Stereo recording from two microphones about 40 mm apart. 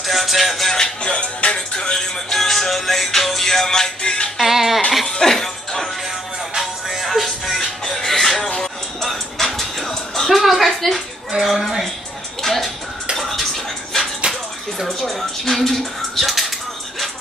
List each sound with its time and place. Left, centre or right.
0.0 s music: centre
0.7 s music: left
1.8 s music: centre
4.4 s music: centre
5.2 s music: centre
6.5 s music: centre
11.4 s a sound: centre
14.2 s bathtub: right
14.9 s a sound: centre